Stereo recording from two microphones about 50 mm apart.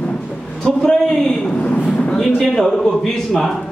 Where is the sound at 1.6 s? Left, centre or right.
Left.